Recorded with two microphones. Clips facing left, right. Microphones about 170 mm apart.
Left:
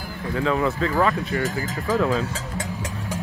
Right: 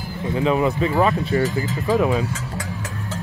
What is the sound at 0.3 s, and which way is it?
Speech, 20° right (ahead or behind).